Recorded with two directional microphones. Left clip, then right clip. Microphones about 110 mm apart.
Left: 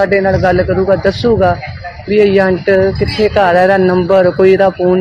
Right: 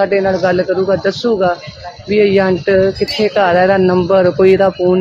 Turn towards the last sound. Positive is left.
turn(degrees=-5)  # may be behind; listen again after turning